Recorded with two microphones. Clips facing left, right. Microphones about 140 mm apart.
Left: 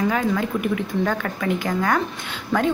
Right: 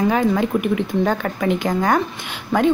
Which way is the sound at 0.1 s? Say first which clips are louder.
Right 4 dB; 25° right (ahead or behind).